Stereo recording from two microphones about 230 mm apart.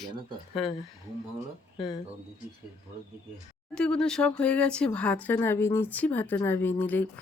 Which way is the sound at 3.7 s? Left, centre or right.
Centre.